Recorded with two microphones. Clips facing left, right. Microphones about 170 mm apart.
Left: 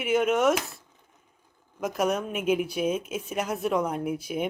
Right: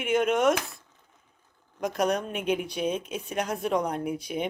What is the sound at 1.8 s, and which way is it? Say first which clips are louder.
Speech: even; 5° left (ahead or behind).